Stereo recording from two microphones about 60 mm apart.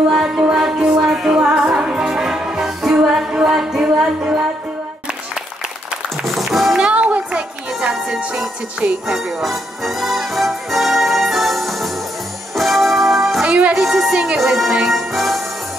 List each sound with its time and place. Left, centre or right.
0.1 s music: centre
6.0 s music: centre
6.8 s music: centre
7.9 s music: centre
13.4 s music: centre
13.7 s music: centre